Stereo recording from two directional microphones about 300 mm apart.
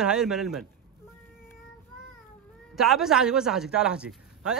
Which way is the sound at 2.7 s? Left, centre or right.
Centre.